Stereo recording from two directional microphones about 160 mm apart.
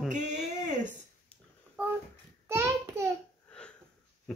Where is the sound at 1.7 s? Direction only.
10° right (ahead or behind).